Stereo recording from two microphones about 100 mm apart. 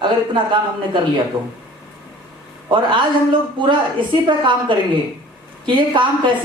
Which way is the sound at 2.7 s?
55° right (ahead or behind).